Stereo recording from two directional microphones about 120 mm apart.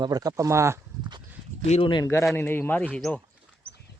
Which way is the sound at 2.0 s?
25° left (ahead or behind).